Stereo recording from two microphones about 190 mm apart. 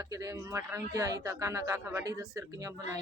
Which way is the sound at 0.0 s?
20° right (ahead or behind).